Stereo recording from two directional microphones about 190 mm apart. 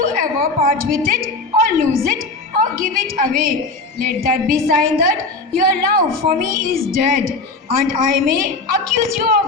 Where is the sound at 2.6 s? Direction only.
45° right (ahead or behind).